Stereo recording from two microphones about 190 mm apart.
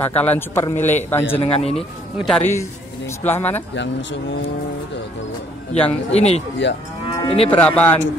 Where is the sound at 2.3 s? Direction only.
10° left (ahead or behind).